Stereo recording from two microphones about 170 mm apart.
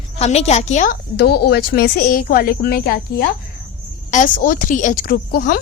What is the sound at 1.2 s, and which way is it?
Speech, 70° left (ahead or behind).